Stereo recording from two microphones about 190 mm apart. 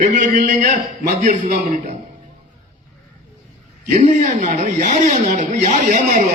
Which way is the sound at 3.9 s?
40° right (ahead or behind).